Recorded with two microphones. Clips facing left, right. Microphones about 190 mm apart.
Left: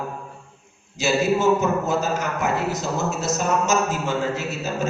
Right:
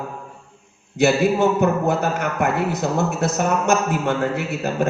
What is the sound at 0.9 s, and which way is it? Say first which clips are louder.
A man's voice: right 4 dB; 60° right (ahead or behind).